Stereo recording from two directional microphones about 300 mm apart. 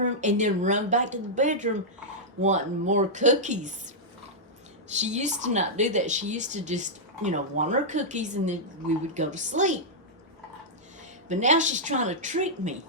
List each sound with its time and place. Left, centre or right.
0.0 s speech: right
11.3 s speech: right